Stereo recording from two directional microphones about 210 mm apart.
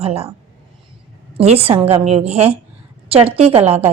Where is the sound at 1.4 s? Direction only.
30° right (ahead or behind).